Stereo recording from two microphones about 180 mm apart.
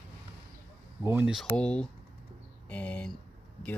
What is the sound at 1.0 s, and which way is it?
Speech, 15° right (ahead or behind).